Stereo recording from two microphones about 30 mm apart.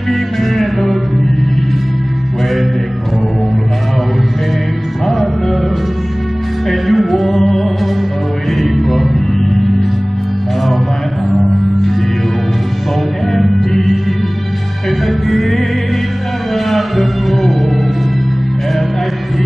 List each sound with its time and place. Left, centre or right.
0.1 s music: centre
5.0 s music: centre
6.7 s music: centre
11.3 s music: centre
13.3 s music: centre
15.0 s music: centre